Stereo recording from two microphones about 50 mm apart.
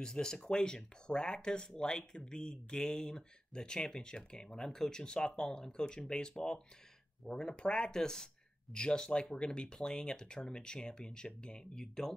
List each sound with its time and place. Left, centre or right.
0.0 s speech: centre